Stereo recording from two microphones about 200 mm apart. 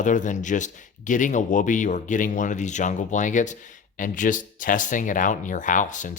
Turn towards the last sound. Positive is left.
turn(degrees=40)  # may be behind; listen again after turning